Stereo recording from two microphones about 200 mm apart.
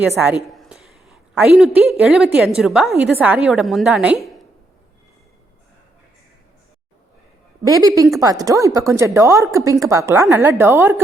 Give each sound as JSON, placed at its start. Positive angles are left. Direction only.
{"t": 0.2, "sound": "a man's voice", "side_deg": -5}
{"t": 7.6, "sound": "a woman's voice", "side_deg": -15}